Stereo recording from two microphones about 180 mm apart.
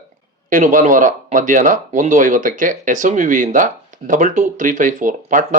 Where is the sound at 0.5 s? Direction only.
45° right (ahead or behind).